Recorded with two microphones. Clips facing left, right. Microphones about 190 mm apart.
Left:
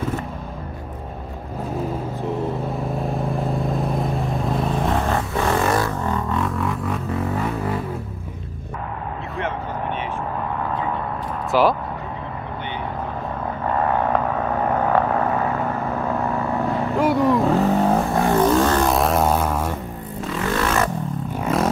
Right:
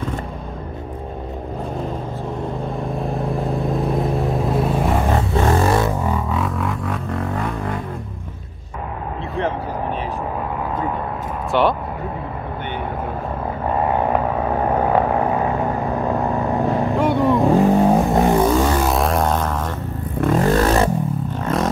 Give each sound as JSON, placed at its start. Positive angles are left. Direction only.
{"t": 3.0, "sound": "vehicle", "side_deg": 0}
{"t": 5.3, "sound": "a sound", "side_deg": -30}
{"t": 5.9, "sound": "music", "side_deg": -10}
{"t": 11.5, "sound": "a sound", "side_deg": 0}
{"t": 13.8, "sound": "vehicle", "side_deg": -15}
{"t": 16.9, "sound": "vehicle", "side_deg": 0}
{"t": 17.4, "sound": "vehicle", "side_deg": -15}
{"t": 18.4, "sound": "vehicle", "side_deg": -5}
{"t": 20.2, "sound": "vehicle", "side_deg": -45}
{"t": 21.4, "sound": "vehicle", "side_deg": 5}